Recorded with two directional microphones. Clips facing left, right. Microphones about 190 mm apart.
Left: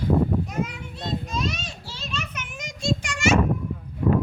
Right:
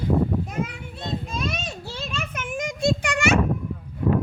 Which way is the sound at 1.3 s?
55° right (ahead or behind).